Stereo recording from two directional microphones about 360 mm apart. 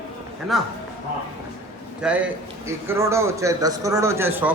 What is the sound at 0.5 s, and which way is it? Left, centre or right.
Speech, centre.